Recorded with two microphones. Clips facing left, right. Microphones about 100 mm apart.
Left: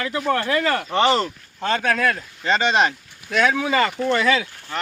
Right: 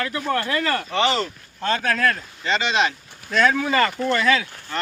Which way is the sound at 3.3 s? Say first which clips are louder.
Even; 10° left (ahead or behind).